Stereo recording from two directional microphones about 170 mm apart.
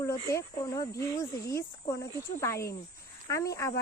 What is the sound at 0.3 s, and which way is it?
Speech, 20° left (ahead or behind).